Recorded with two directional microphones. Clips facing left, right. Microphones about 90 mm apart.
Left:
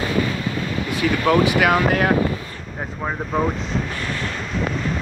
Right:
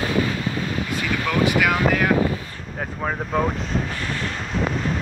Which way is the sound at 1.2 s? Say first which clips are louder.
Left 3 dB; 45° left (ahead or behind).